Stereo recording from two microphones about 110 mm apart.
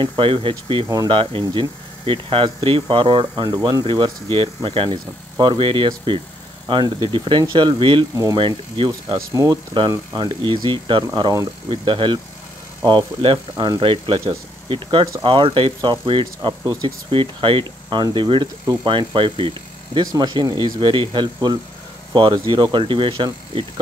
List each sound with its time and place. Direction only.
0.0 s speech: 50° right (ahead or behind)
9.3 s speech: 30° right (ahead or behind)
9.8 s speech: 45° right (ahead or behind)